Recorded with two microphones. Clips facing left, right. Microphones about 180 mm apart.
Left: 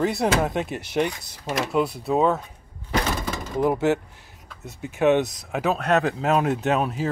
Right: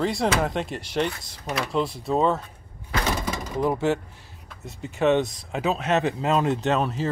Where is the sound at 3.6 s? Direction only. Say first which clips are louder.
Left 2 dB; 15° left (ahead or behind).